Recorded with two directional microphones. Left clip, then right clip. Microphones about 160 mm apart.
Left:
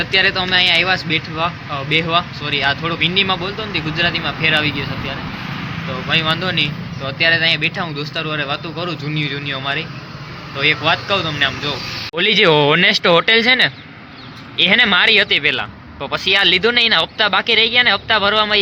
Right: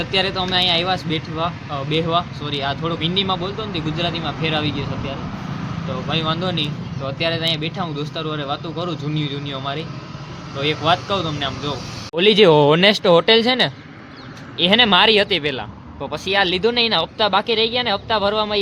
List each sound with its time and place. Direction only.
0.0 s a man's voice: 5° right (ahead or behind)
12.1 s speech: 15° right (ahead or behind)